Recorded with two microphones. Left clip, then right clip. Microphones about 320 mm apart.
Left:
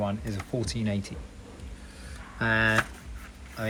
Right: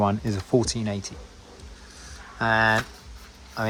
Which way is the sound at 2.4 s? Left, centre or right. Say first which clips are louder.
Right 4 dB; centre.